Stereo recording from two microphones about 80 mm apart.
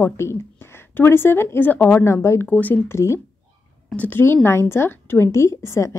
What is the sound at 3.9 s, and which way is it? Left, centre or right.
Speech, left.